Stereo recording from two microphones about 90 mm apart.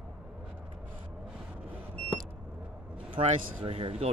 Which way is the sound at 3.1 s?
75° right (ahead or behind).